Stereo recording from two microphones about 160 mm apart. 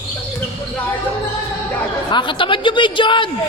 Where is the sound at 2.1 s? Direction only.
30° left (ahead or behind).